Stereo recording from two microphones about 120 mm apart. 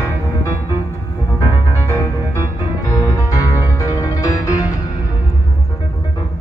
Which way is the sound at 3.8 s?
30° left (ahead or behind).